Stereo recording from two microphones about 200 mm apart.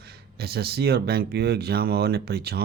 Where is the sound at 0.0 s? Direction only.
50° right (ahead or behind).